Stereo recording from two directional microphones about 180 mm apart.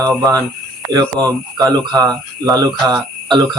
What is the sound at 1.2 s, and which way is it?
Speech, 20° right (ahead or behind).